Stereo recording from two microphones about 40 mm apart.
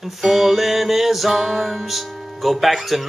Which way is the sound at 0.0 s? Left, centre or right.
Centre.